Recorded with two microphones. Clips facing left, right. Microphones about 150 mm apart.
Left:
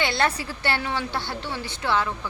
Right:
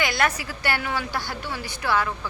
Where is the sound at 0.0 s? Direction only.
30° left (ahead or behind).